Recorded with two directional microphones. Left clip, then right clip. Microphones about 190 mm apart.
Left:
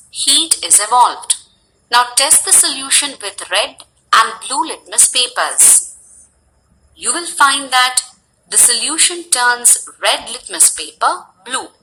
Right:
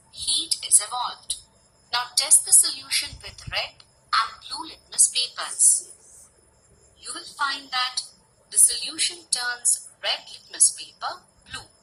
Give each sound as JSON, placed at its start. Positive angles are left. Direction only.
{"t": 0.1, "sound": "a sound", "side_deg": 45}
{"t": 1.9, "sound": "speech", "side_deg": 45}
{"t": 7.0, "sound": "speech", "side_deg": 45}